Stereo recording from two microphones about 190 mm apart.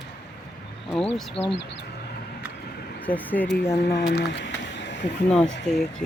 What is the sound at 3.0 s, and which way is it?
Speech, 10° left (ahead or behind).